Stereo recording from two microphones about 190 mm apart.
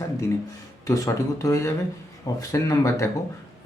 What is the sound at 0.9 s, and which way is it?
Speech, 15° left (ahead or behind).